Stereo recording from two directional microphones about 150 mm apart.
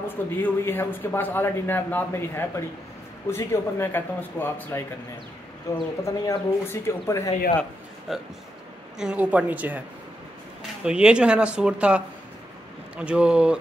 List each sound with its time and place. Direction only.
0.1 s a man's voice: 15° left (ahead or behind)
8.1 s speech: centre (ahead or behind)